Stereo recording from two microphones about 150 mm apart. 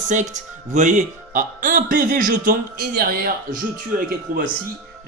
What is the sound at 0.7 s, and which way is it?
Speech, 55° right (ahead or behind).